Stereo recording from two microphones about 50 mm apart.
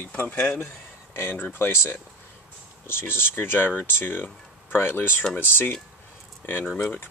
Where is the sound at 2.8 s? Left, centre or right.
Left.